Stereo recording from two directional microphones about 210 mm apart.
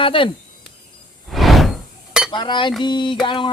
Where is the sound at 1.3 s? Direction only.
Centre (ahead or behind).